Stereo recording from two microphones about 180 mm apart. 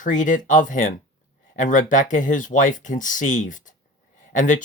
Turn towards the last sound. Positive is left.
turn(degrees=45)  # may be behind; listen again after turning